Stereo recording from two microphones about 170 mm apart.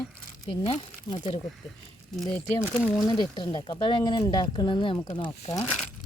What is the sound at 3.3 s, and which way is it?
Speech, 25° left (ahead or behind).